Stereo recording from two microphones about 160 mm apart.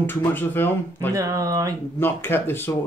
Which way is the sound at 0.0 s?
10° left (ahead or behind).